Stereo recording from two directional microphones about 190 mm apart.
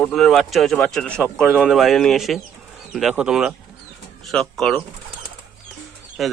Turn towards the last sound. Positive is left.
turn(degrees=0)  # may be behind; listen again after turning